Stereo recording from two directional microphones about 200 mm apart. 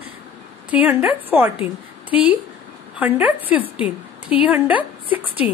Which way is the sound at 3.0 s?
10° right (ahead or behind).